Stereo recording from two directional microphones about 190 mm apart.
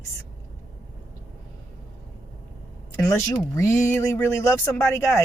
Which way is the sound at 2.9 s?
10° left (ahead or behind).